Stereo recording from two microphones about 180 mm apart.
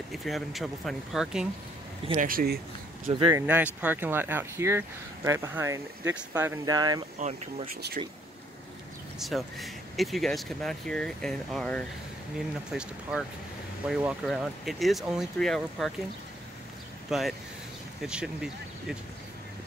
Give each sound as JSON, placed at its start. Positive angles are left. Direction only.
{"t": 0.1, "sound": "speech", "side_deg": 0}
{"t": 2.1, "sound": "speech", "side_deg": -50}
{"t": 3.1, "sound": "speech", "side_deg": -30}
{"t": 3.3, "sound": "speech", "side_deg": -10}
{"t": 7.2, "sound": "speech", "side_deg": -40}
{"t": 7.7, "sound": "speech", "side_deg": -55}
{"t": 9.2, "sound": "speech", "side_deg": 0}
{"t": 17.1, "sound": "speech", "side_deg": 0}